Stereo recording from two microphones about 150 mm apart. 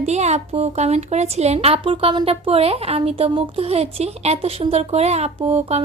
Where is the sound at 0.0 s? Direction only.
50° right (ahead or behind).